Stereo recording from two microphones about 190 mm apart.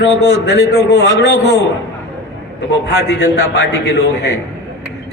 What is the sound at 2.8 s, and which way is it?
Speech, 60° left (ahead or behind).